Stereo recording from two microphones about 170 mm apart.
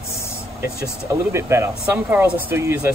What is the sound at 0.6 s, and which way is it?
Speech, 15° right (ahead or behind).